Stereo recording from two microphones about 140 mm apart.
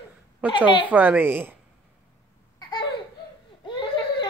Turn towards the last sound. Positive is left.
turn(degrees=35)  # may be behind; listen again after turning